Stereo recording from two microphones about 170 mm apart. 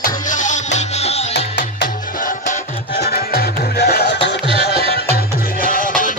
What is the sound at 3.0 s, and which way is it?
Music, 70° left (ahead or behind).